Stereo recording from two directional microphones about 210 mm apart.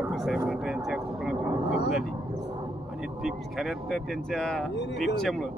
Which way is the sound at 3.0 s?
Centre (ahead or behind).